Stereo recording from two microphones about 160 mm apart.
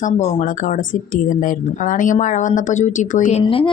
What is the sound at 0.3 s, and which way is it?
Speech, 50° left (ahead or behind).